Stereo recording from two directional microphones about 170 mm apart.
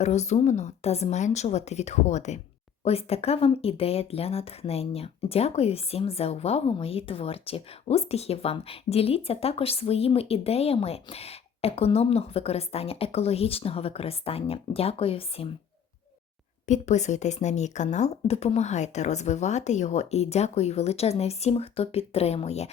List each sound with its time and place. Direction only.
0.0 s speech: 40° left (ahead or behind)
16.6 s speech: 45° left (ahead or behind)